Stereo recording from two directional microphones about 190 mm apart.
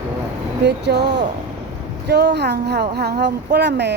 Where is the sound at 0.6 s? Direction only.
60° right (ahead or behind).